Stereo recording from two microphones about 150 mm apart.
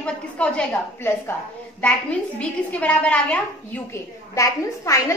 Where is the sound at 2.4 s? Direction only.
10° left (ahead or behind).